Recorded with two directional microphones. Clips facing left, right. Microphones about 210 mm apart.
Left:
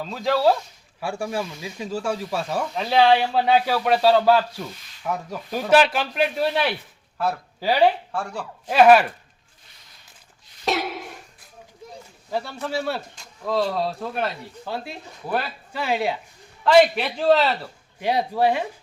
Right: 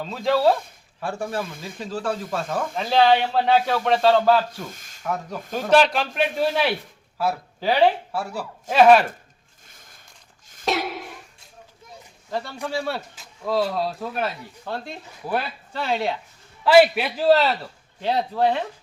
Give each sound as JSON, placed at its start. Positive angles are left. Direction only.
{"t": 0.0, "sound": "speech", "side_deg": 0}
{"t": 1.5, "sound": "speech", "side_deg": -50}
{"t": 1.8, "sound": "speech", "side_deg": 10}
{"t": 4.6, "sound": "a sound", "side_deg": -45}
{"t": 5.0, "sound": "speech", "side_deg": 0}
{"t": 8.7, "sound": "speech", "side_deg": 5}
{"t": 9.6, "sound": "a sound", "side_deg": -50}
{"t": 10.7, "sound": "a sound", "side_deg": 0}
{"t": 12.7, "sound": "speech", "side_deg": 0}
{"t": 16.6, "sound": "speech", "side_deg": -5}
{"t": 18.0, "sound": "speech", "side_deg": 10}